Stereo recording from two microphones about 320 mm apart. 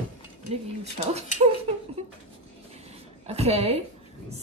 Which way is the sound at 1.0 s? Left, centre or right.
Right.